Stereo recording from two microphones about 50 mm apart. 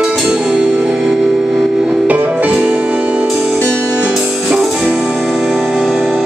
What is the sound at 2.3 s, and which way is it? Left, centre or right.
Music, right.